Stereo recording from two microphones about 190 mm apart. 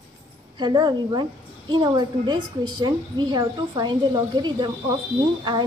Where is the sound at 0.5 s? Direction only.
25° right (ahead or behind).